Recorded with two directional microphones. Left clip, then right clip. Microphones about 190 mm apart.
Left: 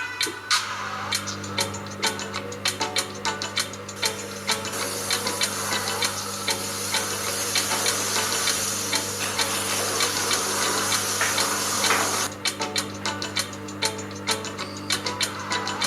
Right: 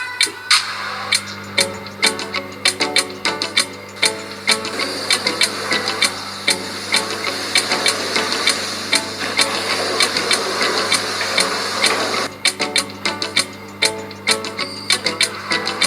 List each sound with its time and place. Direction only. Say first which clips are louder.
1.1 s music: right 12 dB; 45° right (ahead or behind)